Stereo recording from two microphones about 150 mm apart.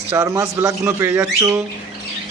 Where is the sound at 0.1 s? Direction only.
20° right (ahead or behind).